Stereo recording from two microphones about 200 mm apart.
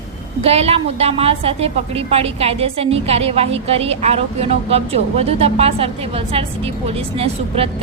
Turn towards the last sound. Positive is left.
turn(degrees=-30)  # may be behind; listen again after turning